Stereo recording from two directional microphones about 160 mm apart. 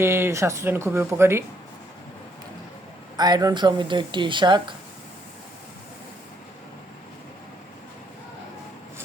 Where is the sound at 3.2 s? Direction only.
25° right (ahead or behind).